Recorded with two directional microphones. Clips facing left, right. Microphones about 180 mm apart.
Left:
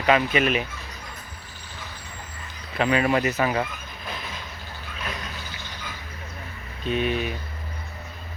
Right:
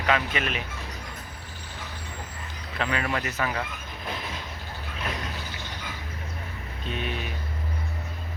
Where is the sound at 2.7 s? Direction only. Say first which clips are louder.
Left 7 dB; 10° left (ahead or behind).